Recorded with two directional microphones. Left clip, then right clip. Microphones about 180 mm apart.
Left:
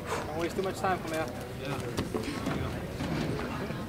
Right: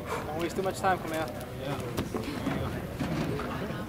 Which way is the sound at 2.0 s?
Centre (ahead or behind).